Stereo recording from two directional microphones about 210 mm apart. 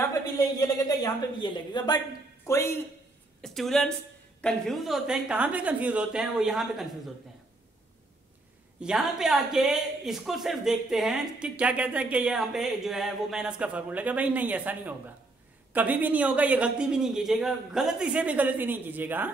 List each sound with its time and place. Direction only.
0.4 s a woman's voice: 15° left (ahead or behind)
3.4 s speech: centre (ahead or behind)
8.8 s a man's voice: centre (ahead or behind)